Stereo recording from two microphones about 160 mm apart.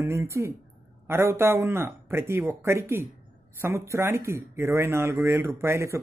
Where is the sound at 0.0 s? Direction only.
15° right (ahead or behind).